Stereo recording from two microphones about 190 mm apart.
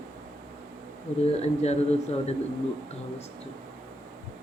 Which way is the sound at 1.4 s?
35° left (ahead or behind).